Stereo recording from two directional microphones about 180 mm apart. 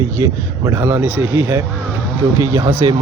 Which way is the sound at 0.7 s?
10° right (ahead or behind).